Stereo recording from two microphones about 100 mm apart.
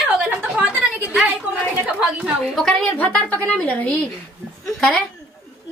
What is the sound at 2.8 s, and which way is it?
A woman's voice, 15° left (ahead or behind).